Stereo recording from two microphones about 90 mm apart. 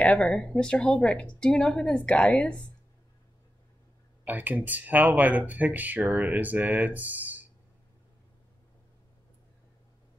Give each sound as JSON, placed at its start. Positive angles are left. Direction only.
{"t": 0.0, "sound": "a woman's voice", "side_deg": 10}
{"t": 4.2, "sound": "speech", "side_deg": -20}